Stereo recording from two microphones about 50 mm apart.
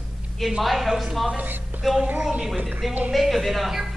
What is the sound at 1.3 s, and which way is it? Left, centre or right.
Speech, right.